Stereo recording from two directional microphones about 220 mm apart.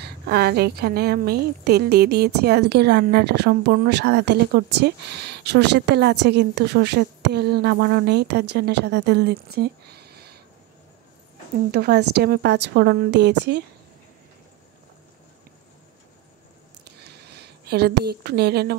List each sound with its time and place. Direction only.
0.0 s a woman's voice: 45° right (ahead or behind)
11.7 s a woman's voice: 45° right (ahead or behind)
17.0 s speech: 50° right (ahead or behind)